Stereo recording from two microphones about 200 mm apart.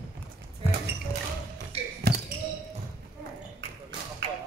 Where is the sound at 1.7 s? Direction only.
30° right (ahead or behind).